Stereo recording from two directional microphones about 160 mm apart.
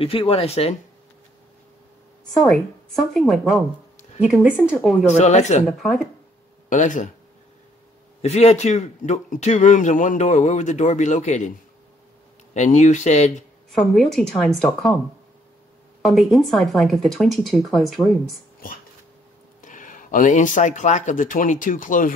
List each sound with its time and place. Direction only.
0.0 s speech: 35° left (ahead or behind)
3.1 s speech: centre (ahead or behind)
5.1 s speech: 45° left (ahead or behind)
5.7 s speech: centre (ahead or behind)
6.7 s speech: 50° left (ahead or behind)
8.2 s speech: 45° left (ahead or behind)
12.5 s speech: 45° left (ahead or behind)
13.7 s speech: centre (ahead or behind)
16.0 s speech: centre (ahead or behind)
19.6 s speech: 55° left (ahead or behind)